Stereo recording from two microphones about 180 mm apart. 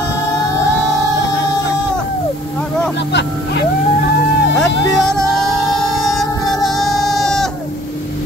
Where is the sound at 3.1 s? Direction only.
70° left (ahead or behind).